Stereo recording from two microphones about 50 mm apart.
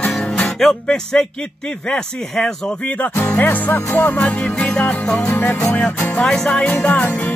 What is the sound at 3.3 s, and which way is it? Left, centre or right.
Music, left.